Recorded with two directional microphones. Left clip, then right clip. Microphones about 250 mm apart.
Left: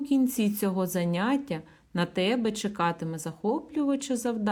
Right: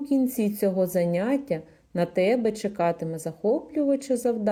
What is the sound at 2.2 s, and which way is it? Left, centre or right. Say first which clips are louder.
Speech: right 5 dB; left.